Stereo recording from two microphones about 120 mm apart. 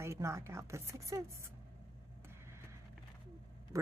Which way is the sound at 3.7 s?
25° right (ahead or behind).